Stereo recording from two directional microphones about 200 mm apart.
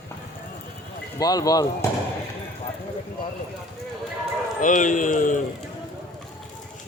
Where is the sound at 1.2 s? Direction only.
20° left (ahead or behind).